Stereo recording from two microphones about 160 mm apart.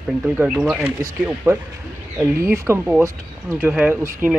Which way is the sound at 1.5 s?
20° right (ahead or behind).